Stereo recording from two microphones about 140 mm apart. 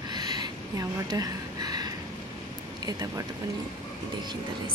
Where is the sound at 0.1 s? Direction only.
30° right (ahead or behind).